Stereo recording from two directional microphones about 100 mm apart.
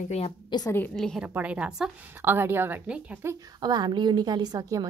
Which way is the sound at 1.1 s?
15° right (ahead or behind).